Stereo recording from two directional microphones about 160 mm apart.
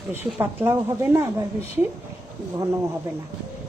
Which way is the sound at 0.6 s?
20° right (ahead or behind).